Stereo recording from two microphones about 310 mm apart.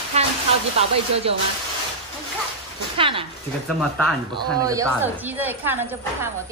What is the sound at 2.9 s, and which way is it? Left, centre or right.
Speech, centre.